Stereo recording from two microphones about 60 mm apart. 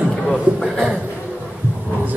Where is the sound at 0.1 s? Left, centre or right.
Centre.